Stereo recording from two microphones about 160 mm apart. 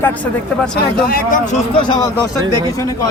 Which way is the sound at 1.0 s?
70° left (ahead or behind).